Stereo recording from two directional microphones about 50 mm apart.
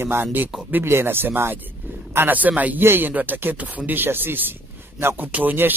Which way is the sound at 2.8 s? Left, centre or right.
Right.